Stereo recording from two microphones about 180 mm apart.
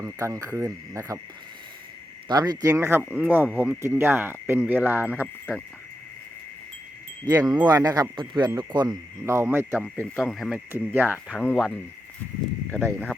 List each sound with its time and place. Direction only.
0.0 s speech: 15° right (ahead or behind)
2.2 s speech: 20° right (ahead or behind)
5.2 s speech: 10° left (ahead or behind)
7.3 s speech: 20° right (ahead or behind)
10.2 s speech: centre (ahead or behind)